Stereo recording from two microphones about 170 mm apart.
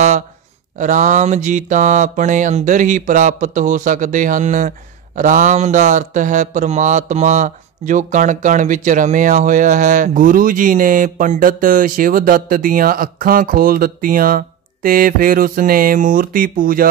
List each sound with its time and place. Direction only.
0.7 s mantra: 45° right (ahead or behind)